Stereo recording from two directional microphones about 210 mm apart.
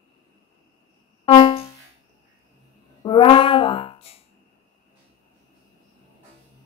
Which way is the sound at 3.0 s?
25° left (ahead or behind).